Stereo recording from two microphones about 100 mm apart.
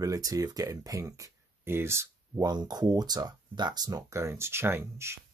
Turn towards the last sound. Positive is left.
turn(degrees=-25)  # may be behind; listen again after turning